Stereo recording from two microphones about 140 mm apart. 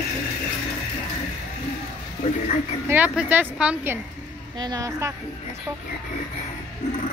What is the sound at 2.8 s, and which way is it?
Speech, 10° right (ahead or behind).